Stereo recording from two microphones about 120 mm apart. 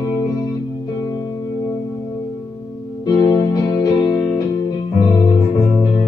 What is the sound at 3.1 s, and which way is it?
Music, 35° left (ahead or behind).